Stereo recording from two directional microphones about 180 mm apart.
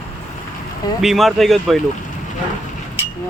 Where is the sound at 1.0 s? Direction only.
Centre (ahead or behind).